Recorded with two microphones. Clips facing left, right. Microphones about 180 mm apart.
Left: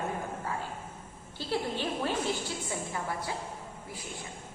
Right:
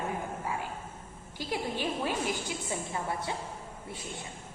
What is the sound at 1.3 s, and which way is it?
Speech, 15° right (ahead or behind).